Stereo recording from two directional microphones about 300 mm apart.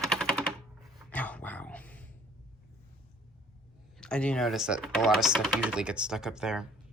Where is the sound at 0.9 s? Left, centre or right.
Centre.